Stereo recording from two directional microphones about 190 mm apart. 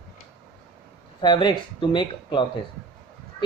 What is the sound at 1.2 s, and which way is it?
Speech, 25° left (ahead or behind).